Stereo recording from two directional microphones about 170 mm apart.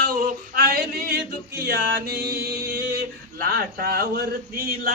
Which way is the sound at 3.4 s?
60° right (ahead or behind).